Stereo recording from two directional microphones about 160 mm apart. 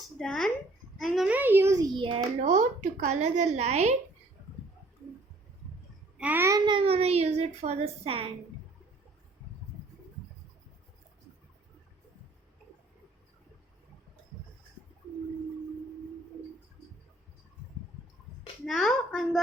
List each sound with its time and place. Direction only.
0.2 s a woman's voice: centre (ahead or behind); by 2.2 s 30° right (ahead or behind)
2.4 s a woman's voice: 50° right (ahead or behind)
6.1 s a child's voice: 10° right (ahead or behind)
6.7 s speech: 35° right (ahead or behind)
18.6 s a woman's voice: centre (ahead or behind)